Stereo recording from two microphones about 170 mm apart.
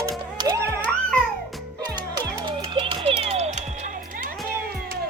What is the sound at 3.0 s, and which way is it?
Music, 35° right (ahead or behind).